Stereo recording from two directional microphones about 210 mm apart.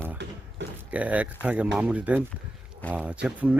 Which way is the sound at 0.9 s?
5° right (ahead or behind).